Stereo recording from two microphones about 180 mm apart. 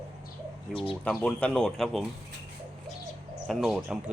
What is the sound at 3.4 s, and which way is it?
Speech, centre (ahead or behind).